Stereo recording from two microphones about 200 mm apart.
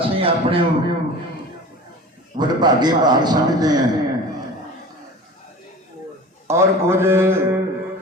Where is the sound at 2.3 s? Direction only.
20° right (ahead or behind).